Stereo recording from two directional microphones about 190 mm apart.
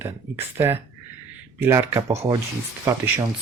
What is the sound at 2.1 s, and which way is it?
Speech, 35° right (ahead or behind).